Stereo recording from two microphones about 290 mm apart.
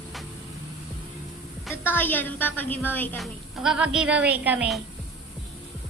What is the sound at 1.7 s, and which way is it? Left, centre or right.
A woman's voice, centre.